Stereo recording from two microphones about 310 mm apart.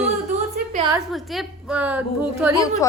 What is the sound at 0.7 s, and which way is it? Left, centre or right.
Speech, centre.